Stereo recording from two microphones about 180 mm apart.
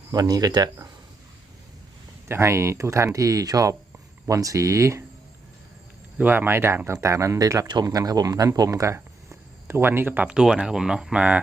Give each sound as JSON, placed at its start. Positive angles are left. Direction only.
{"t": 0.1, "sound": "speech", "side_deg": -20}
{"t": 2.2, "sound": "speech", "side_deg": -15}
{"t": 6.1, "sound": "speech", "side_deg": -10}